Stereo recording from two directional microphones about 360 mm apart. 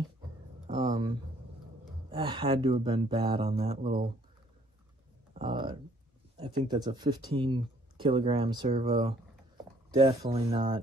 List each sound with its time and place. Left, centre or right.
0.7 s speech: centre
5.3 s a sound: centre
6.3 s speech: centre
8.7 s speech: right